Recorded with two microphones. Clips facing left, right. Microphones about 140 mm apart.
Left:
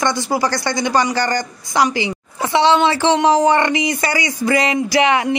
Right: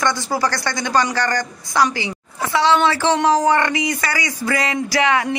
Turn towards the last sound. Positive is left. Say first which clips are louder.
# left 3 dB
turn(degrees=20)  # may be behind; listen again after turning